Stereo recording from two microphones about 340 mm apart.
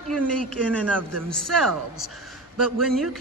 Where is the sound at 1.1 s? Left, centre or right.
Right.